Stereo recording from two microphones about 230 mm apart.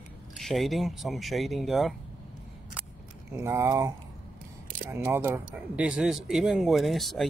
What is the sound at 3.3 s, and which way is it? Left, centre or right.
Speech, centre.